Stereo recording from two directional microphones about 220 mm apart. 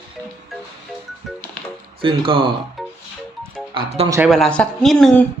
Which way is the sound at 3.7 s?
25° right (ahead or behind).